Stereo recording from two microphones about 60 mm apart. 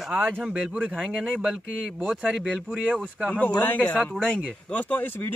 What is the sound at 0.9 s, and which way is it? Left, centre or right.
Speech, centre.